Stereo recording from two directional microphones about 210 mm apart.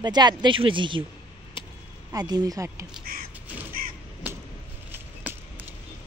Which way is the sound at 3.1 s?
45° right (ahead or behind).